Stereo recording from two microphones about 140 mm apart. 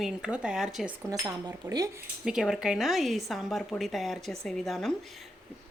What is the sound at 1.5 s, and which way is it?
Speech, 25° right (ahead or behind).